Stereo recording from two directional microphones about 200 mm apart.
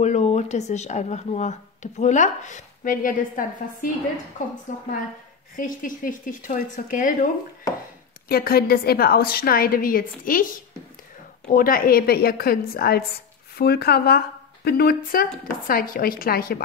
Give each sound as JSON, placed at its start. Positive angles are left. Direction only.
{"t": 0.0, "sound": "speech", "side_deg": 35}
{"t": 5.6, "sound": "speech", "side_deg": 40}
{"t": 8.3, "sound": "a woman's voice", "side_deg": 50}
{"t": 11.4, "sound": "a woman's voice", "side_deg": 45}